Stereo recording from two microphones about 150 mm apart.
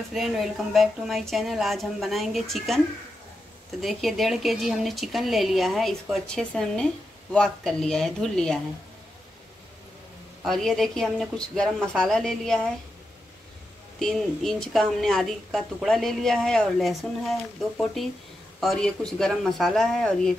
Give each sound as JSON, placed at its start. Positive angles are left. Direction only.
{"t": 0.1, "sound": "speech", "side_deg": 0}
{"t": 3.8, "sound": "speech", "side_deg": 0}
{"t": 10.4, "sound": "speech", "side_deg": 0}
{"t": 13.9, "sound": "speech", "side_deg": 0}